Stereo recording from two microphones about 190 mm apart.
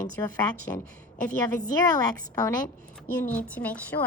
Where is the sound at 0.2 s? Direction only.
15° left (ahead or behind).